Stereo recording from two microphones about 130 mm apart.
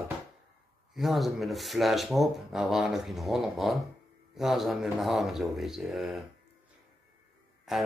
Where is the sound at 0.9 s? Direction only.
Centre (ahead or behind).